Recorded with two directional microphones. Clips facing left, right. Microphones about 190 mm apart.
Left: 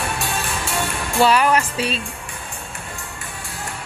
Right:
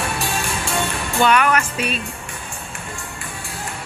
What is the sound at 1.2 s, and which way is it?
Music, 30° left (ahead or behind).